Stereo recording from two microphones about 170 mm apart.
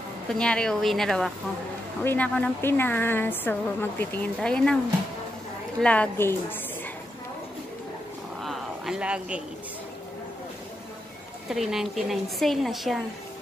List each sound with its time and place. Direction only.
0.3 s a woman's voice: 5° left (ahead or behind)
5.8 s speech: 10° left (ahead or behind)
8.4 s a sound: centre (ahead or behind)
11.4 s a woman's voice: centre (ahead or behind)